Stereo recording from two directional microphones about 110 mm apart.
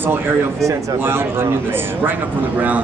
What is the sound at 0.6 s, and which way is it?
A man's voice, 20° right (ahead or behind).